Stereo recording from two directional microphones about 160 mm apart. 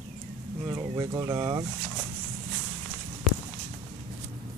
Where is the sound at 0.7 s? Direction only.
20° right (ahead or behind).